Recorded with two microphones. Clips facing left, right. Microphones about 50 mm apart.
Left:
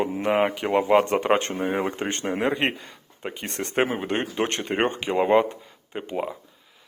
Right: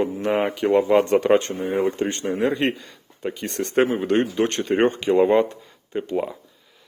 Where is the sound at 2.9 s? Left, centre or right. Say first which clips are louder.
Right 5 dB; centre.